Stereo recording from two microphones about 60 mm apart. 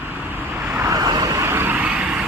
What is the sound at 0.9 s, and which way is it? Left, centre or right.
Vehicle, right.